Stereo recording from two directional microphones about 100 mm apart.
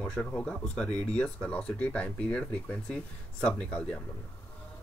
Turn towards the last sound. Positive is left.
turn(degrees=10)  # may be behind; listen again after turning